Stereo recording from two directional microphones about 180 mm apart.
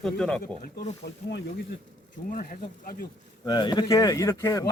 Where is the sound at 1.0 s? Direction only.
70° left (ahead or behind).